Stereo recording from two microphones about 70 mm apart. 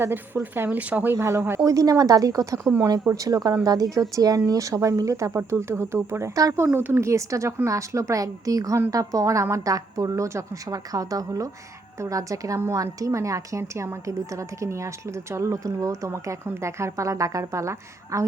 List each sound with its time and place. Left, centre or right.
0.5 s speech: right
1.1 s speech: right
1.6 s a woman's voice: right
5.3 s speech: right
6.3 s speech: right
6.7 s a woman's voice: right
10.7 s a woman's voice: right